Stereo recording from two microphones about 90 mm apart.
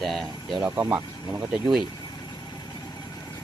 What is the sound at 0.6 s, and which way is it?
Speech, 30° right (ahead or behind).